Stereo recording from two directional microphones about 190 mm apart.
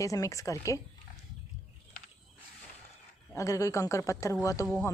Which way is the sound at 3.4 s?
15° left (ahead or behind).